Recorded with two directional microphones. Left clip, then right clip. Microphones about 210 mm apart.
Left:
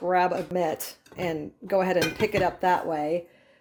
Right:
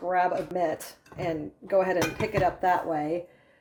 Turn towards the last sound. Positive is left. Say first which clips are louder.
# left 1 dB
turn(degrees=45)  # may be behind; listen again after turning